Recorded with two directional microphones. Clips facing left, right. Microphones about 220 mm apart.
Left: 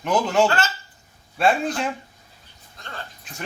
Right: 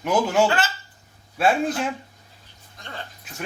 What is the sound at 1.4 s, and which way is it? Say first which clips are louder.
Speech: even; 5° right (ahead or behind).